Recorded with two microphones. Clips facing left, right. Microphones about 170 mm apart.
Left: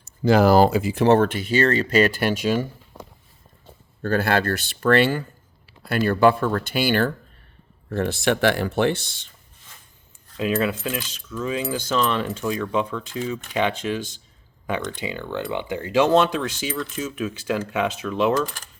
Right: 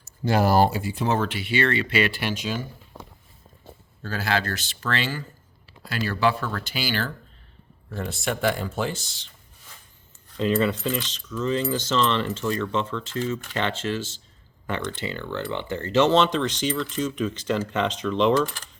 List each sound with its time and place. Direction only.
0.3 s speech: 90° left; by 2.6 s 55° left (ahead or behind)
4.0 s speech: 55° left (ahead or behind)
7.9 s speech: 70° left (ahead or behind)
10.3 s keys jangling: 5° left (ahead or behind)